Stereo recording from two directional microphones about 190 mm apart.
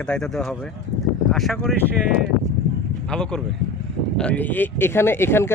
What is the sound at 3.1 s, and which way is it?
Speech, 5° left (ahead or behind).